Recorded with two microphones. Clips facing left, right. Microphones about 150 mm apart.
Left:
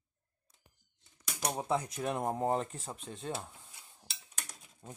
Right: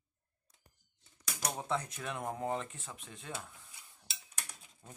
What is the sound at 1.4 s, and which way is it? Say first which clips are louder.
Speech: left 4 dB; 10° left (ahead or behind).